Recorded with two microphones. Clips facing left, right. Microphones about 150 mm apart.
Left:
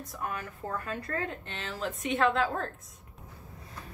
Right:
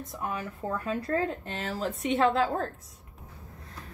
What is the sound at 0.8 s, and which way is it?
A woman's voice, 30° right (ahead or behind).